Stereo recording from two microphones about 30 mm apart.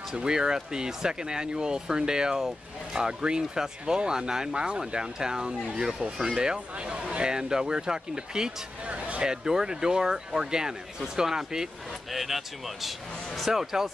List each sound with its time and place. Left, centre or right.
0.1 s speech: right
6.9 s a man's voice: right
7.3 s speech: right
8.8 s a sound: right
9.2 s speech: right
12.1 s speech: centre